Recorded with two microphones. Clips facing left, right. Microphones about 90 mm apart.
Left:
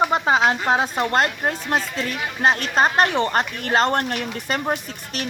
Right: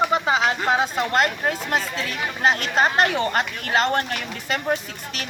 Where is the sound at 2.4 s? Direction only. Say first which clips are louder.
Left 1 dB; 40° left (ahead or behind).